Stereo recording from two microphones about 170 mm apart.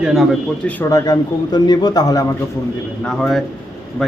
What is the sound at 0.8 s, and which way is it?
A man's voice, 20° left (ahead or behind).